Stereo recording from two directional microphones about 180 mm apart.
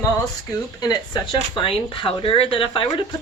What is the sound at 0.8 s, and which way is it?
Speech, 20° left (ahead or behind).